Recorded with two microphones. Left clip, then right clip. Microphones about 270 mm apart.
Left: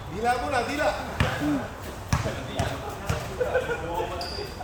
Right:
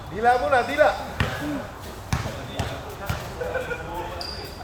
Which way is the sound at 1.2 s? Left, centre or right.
Centre.